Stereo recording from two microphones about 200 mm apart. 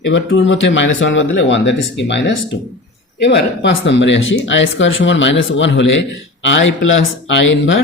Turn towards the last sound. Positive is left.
turn(degrees=65)  # may be behind; listen again after turning